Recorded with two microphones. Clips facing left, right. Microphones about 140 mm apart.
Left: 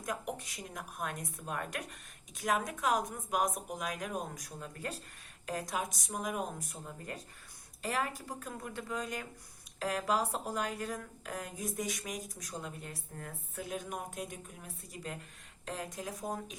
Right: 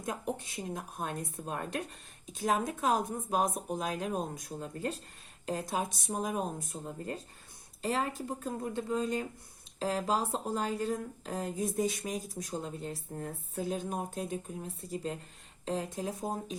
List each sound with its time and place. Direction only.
0.0 s a woman's voice: 25° right (ahead or behind)